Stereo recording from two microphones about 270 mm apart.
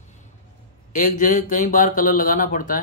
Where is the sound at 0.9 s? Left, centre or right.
Left.